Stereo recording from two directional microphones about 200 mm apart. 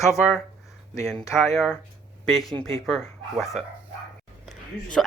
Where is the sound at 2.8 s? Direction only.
Centre (ahead or behind).